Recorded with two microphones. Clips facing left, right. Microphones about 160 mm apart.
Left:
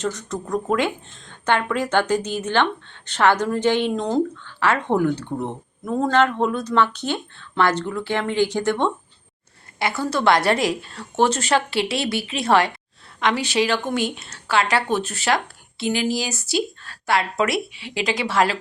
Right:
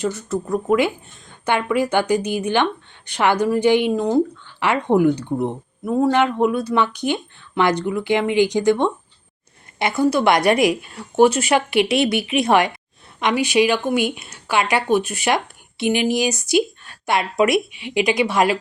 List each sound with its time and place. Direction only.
0.0 s speech: 10° right (ahead or behind)